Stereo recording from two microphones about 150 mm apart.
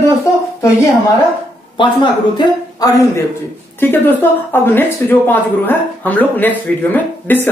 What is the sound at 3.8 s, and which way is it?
Speech, 15° left (ahead or behind).